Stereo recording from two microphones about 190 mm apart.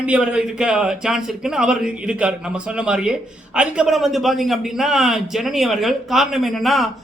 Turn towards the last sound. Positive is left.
turn(degrees=0)  # may be behind; listen again after turning